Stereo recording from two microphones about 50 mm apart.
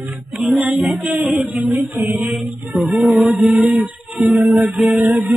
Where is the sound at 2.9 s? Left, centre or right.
Centre.